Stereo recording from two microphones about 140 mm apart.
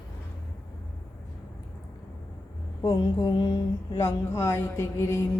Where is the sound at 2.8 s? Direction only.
30° left (ahead or behind).